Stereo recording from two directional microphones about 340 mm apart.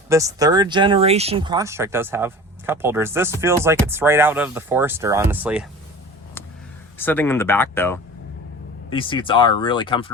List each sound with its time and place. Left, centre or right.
0.1 s speech: centre
7.0 s speech: centre